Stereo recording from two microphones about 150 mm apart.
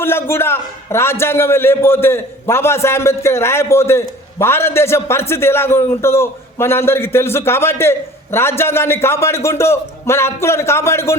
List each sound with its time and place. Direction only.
0.0 s a man's voice: 15° left (ahead or behind)